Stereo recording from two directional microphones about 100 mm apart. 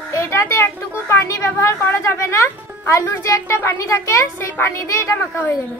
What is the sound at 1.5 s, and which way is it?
A woman's voice, 30° left (ahead or behind).